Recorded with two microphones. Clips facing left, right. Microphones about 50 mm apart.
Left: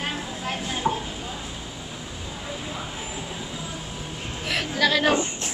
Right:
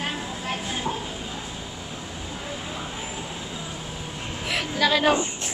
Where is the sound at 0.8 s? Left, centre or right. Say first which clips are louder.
Left 6 dB; left.